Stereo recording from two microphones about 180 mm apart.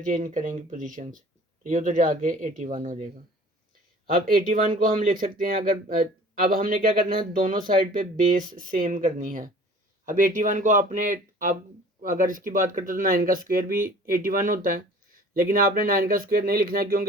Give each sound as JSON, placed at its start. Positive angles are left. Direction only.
{"t": 0.0, "sound": "speech", "side_deg": -45}